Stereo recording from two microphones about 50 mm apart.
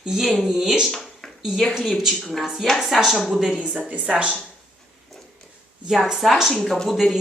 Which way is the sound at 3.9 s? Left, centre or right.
Right.